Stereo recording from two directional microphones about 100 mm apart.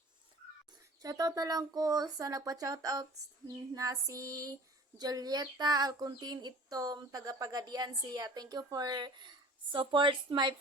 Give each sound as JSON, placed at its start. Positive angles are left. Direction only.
{"t": 1.0, "sound": "a woman's voice", "side_deg": -40}